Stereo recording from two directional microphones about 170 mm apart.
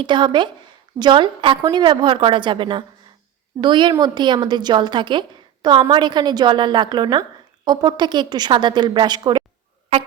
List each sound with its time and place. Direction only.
0.0 s a woman's voice: 25° right (ahead or behind)